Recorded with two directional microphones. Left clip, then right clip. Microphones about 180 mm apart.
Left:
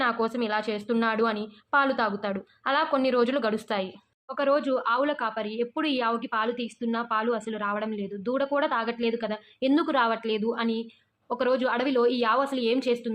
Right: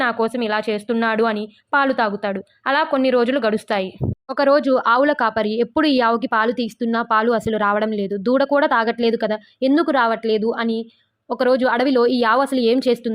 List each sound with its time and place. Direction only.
0.0 s a woman's voice: 30° right (ahead or behind)